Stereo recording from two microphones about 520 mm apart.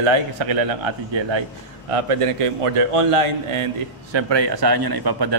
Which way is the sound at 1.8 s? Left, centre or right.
Right.